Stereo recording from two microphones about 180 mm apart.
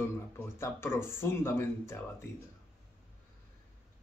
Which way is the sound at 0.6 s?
15° left (ahead or behind).